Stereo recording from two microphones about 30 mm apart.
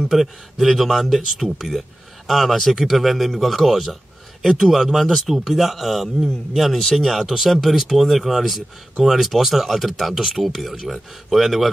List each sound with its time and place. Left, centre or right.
0.1 s a man's voice: centre
5.0 s speech: centre
7.2 s a man's voice: centre